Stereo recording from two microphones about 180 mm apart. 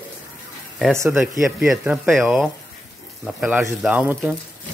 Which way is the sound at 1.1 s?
5° right (ahead or behind).